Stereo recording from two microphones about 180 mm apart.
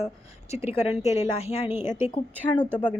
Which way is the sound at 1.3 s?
35° left (ahead or behind).